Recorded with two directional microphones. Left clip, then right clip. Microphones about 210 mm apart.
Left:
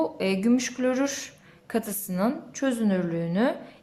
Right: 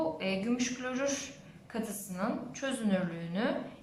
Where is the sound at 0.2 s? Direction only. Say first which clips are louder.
Left 8 dB; 35° left (ahead or behind).